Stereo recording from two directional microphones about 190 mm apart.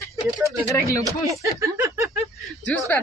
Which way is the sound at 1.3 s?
15° right (ahead or behind).